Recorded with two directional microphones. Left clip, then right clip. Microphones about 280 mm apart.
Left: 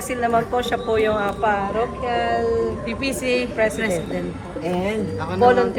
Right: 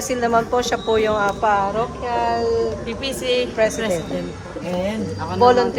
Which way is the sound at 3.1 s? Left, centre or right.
Centre.